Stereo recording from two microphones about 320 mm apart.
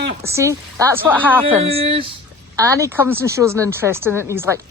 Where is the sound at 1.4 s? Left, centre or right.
Centre.